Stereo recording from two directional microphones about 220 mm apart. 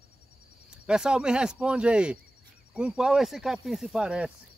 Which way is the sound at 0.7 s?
5° right (ahead or behind).